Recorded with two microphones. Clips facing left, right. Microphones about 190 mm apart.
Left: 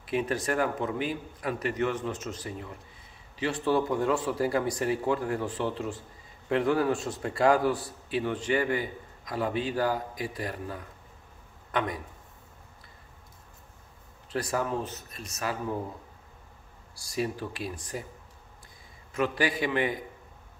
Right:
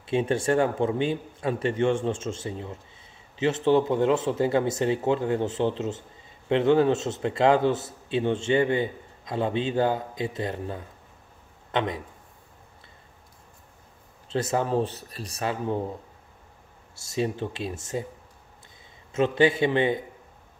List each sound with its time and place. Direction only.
0.0 s a man's voice: 25° right (ahead or behind)
14.3 s a man's voice: 25° right (ahead or behind)
16.9 s a man's voice: 25° right (ahead or behind)
19.1 s a man's voice: 25° right (ahead or behind)